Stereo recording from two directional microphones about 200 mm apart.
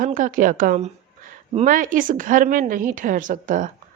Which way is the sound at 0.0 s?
40° right (ahead or behind).